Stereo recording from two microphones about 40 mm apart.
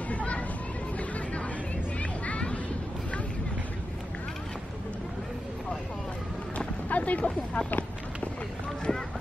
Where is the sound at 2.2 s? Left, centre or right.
Left.